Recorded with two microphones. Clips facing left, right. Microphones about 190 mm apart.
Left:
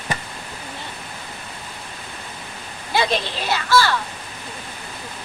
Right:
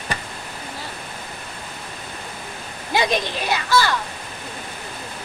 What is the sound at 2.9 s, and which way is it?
Children playing, 15° right (ahead or behind).